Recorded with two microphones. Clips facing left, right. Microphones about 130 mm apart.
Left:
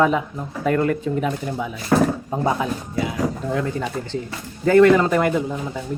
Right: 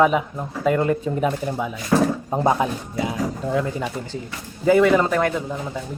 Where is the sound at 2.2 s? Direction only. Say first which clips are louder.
Right 2 dB; 30° right (ahead or behind).